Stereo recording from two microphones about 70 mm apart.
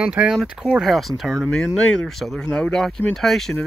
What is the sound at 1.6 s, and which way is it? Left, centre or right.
Speech, centre.